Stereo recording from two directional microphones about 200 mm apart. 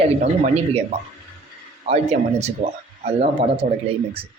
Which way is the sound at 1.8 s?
35° right (ahead or behind).